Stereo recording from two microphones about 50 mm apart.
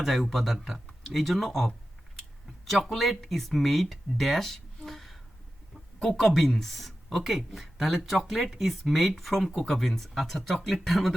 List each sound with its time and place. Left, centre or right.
0.0 s speech: centre